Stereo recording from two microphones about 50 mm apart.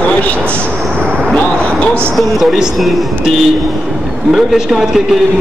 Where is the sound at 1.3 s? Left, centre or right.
Left.